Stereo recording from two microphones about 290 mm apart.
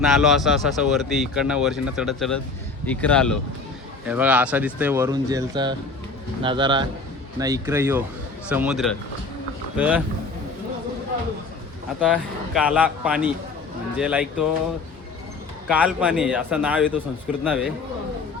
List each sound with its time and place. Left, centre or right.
0.0 s speech: centre
11.9 s speech: centre
15.7 s speech: centre